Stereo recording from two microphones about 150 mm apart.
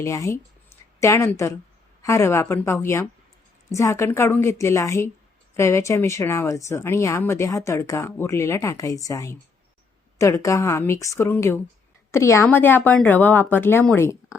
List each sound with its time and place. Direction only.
0.0 s speech: 20° left (ahead or behind)